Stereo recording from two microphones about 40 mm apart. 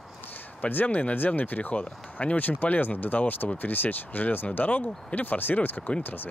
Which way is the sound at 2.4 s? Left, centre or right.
Left.